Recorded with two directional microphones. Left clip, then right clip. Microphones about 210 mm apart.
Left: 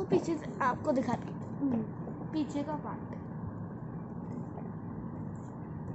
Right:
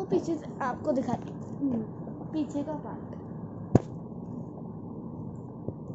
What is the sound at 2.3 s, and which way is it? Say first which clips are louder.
Speech: right 3 dB; 20° left (ahead or behind).